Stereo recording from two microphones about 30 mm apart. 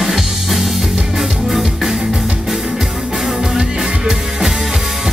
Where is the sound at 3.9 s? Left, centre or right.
Right.